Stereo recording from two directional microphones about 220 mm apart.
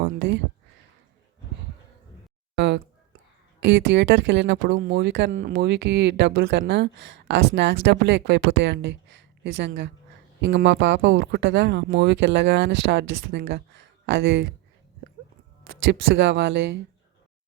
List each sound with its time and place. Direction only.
0.0 s a sound: 50° right (ahead or behind)
2.6 s a sound: 50° right (ahead or behind)
3.6 s speech: 55° right (ahead or behind)
4.8 s speech: 45° right (ahead or behind)
5.3 s speech: 40° right (ahead or behind)
15.7 s speech: 55° right (ahead or behind)